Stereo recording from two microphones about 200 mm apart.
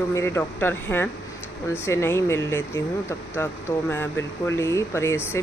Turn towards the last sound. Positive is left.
turn(degrees=10)  # may be behind; listen again after turning